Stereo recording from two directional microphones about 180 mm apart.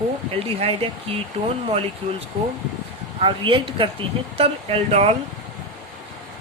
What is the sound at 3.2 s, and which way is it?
Speech, 30° right (ahead or behind).